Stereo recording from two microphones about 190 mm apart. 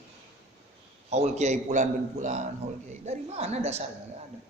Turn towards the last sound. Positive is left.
turn(degrees=-35)  # may be behind; listen again after turning